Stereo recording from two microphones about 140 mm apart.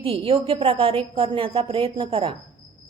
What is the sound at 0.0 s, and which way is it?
A woman's voice, 40° right (ahead or behind).